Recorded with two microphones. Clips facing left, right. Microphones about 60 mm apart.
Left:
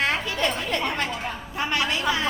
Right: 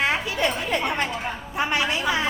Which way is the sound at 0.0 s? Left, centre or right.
Centre.